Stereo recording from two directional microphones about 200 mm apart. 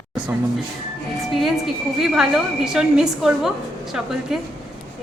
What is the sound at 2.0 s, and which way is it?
A woman's voice, centre (ahead or behind).